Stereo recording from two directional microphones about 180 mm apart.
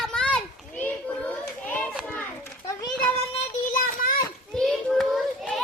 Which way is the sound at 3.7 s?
50° left (ahead or behind).